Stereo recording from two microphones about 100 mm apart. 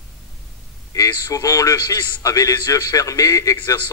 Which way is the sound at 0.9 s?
35° left (ahead or behind).